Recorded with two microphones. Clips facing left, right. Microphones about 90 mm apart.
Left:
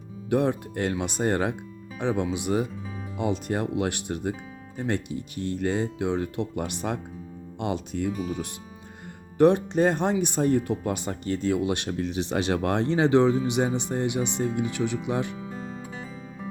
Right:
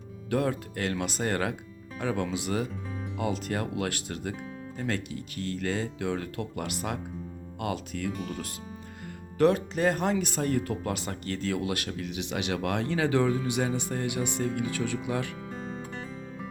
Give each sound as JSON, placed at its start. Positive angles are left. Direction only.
{"t": 0.3, "sound": "speech", "side_deg": 25}
{"t": 9.4, "sound": "speech", "side_deg": 25}
{"t": 15.5, "sound": "music", "side_deg": 0}